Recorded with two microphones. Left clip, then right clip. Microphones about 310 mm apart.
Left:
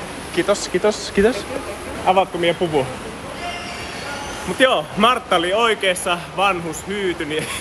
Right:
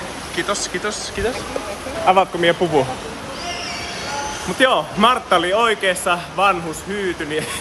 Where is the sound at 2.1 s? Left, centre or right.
Centre.